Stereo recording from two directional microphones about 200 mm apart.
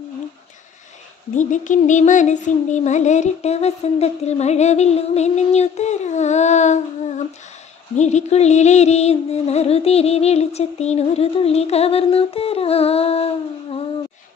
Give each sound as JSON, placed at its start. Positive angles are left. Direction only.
{"t": 1.3, "sound": "speech", "side_deg": 40}